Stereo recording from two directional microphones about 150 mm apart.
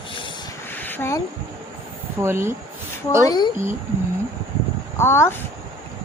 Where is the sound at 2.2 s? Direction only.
15° right (ahead or behind).